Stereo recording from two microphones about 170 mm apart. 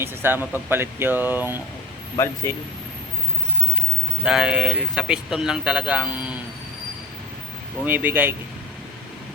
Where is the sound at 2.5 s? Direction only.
15° left (ahead or behind).